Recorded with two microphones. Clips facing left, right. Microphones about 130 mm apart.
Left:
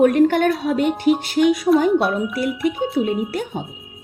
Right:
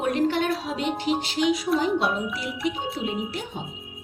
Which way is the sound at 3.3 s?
55° left (ahead or behind).